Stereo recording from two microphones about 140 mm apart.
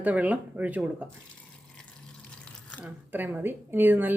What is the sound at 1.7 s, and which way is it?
Water, 5° left (ahead or behind).